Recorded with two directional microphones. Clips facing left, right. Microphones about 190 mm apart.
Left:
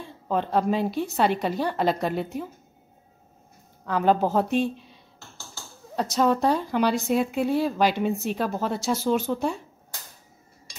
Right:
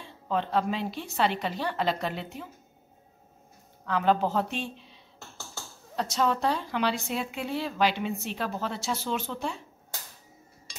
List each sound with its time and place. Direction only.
0.0 s speech: 45° left (ahead or behind)
3.8 s speech: 45° left (ahead or behind)
5.9 s speech: 40° left (ahead or behind)